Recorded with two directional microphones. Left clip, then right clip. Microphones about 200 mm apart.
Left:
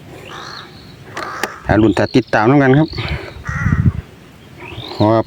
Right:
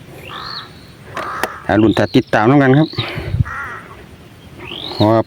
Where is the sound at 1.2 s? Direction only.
45° left (ahead or behind).